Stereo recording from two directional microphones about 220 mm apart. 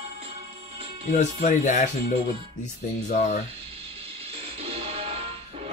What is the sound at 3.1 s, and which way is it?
Speech, 35° left (ahead or behind).